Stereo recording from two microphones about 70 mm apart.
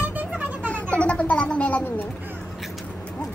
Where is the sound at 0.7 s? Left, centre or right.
Centre.